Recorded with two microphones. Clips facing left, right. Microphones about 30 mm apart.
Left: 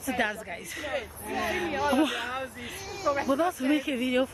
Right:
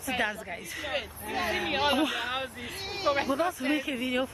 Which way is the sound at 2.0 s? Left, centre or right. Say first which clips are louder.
Left 2 dB; centre.